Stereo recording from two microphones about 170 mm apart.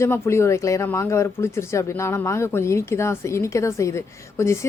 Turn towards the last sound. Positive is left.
turn(degrees=15)  # may be behind; listen again after turning